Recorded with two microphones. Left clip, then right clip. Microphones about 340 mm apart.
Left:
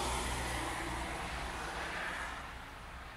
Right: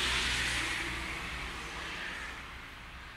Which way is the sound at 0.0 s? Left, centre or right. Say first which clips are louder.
Right 6 dB; centre.